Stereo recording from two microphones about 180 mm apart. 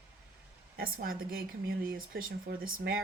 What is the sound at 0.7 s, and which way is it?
A woman's voice, 55° right (ahead or behind).